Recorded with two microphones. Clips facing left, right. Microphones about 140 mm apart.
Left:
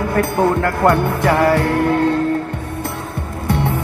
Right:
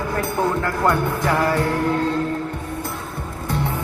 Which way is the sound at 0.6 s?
65° left (ahead or behind).